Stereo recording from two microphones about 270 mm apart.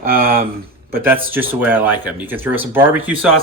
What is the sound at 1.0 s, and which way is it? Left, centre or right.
Speech, centre.